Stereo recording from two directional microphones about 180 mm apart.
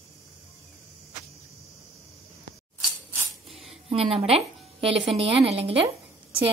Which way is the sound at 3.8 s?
35° right (ahead or behind).